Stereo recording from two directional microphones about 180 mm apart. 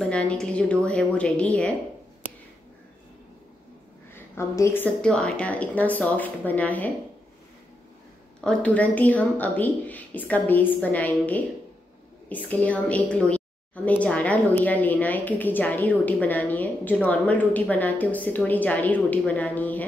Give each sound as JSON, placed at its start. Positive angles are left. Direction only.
{"t": 0.0, "sound": "a woman's voice", "side_deg": 5}
{"t": 4.1, "sound": "a sound", "side_deg": 15}
{"t": 5.0, "sound": "a woman's voice", "side_deg": 5}
{"t": 8.4, "sound": "a woman's voice", "side_deg": 5}